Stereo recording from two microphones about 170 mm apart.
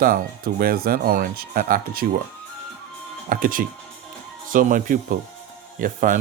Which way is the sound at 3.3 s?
55° right (ahead or behind).